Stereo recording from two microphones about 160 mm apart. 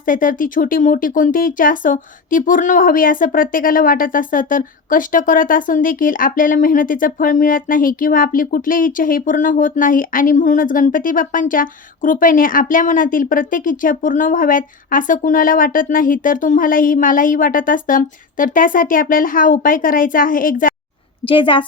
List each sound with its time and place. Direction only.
0.0 s speech: 60° left (ahead or behind)
21.2 s a woman's voice: 30° left (ahead or behind)